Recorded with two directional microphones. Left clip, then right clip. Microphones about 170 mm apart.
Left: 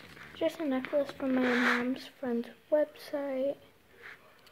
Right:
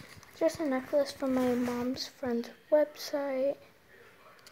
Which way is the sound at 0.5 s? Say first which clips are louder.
Right 1 dB; 10° right (ahead or behind).